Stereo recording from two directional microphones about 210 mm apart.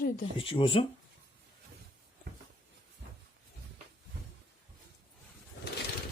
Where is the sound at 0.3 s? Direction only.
25° left (ahead or behind).